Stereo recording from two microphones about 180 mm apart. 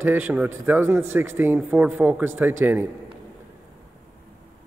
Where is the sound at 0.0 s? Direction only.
10° right (ahead or behind).